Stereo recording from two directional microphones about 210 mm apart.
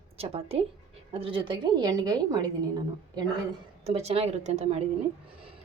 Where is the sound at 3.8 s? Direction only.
30° right (ahead or behind).